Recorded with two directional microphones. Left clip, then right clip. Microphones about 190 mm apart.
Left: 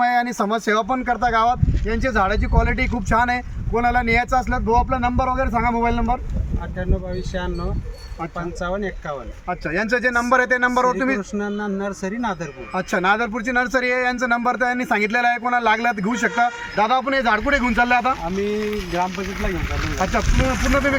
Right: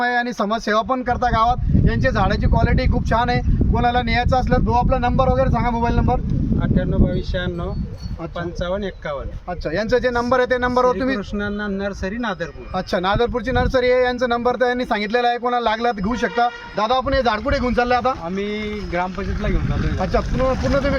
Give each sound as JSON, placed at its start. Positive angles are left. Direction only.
{"t": 0.0, "sound": "speech", "side_deg": -25}
{"t": 4.7, "sound": "speech", "side_deg": -10}
{"t": 4.9, "sound": "speech", "side_deg": -40}
{"t": 8.6, "sound": "speech", "side_deg": -20}
{"t": 9.5, "sound": "speech", "side_deg": -55}
{"t": 11.3, "sound": "speech", "side_deg": -5}
{"t": 12.7, "sound": "speech", "side_deg": -45}
{"t": 20.0, "sound": "speech", "side_deg": -45}